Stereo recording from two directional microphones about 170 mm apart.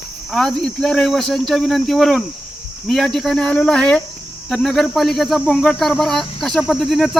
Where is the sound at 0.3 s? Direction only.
Centre (ahead or behind).